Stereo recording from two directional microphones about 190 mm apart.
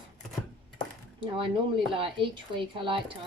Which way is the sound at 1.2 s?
25° right (ahead or behind).